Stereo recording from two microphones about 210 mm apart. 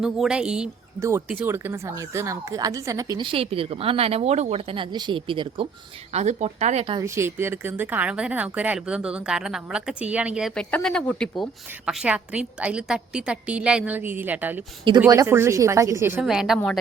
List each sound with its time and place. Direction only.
0.0 s speech: 5° right (ahead or behind); by 7.0 s 30° right (ahead or behind)
7.0 s speech: 15° right (ahead or behind)